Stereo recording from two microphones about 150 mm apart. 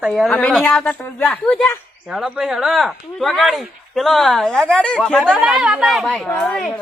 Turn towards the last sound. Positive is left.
turn(degrees=5)  # may be behind; listen again after turning